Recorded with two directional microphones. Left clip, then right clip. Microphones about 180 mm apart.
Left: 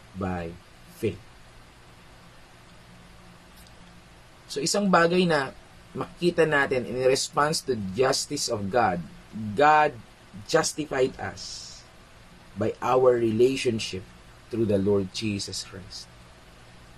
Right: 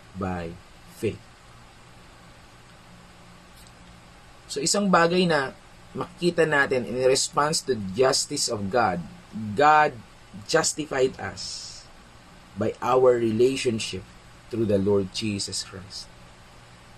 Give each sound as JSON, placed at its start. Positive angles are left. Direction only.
{"t": 0.2, "sound": "speech", "side_deg": 0}
{"t": 4.5, "sound": "speech", "side_deg": 10}
{"t": 12.5, "sound": "speech", "side_deg": 5}